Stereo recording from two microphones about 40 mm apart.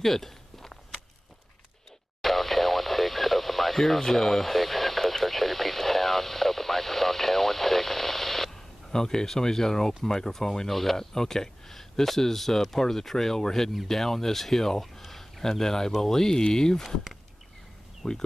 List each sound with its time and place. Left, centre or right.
0.0 s walk: centre
2.2 s speech: centre
18.0 s speech: centre